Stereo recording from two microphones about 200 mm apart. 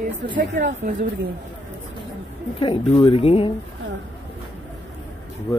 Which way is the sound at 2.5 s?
25° left (ahead or behind).